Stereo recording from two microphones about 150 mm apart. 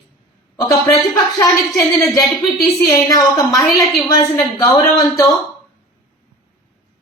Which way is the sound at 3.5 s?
Centre (ahead or behind).